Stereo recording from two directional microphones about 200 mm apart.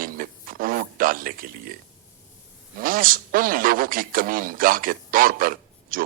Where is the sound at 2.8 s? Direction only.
45° right (ahead or behind).